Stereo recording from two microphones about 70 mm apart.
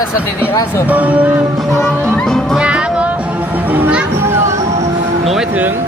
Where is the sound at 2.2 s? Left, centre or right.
Centre.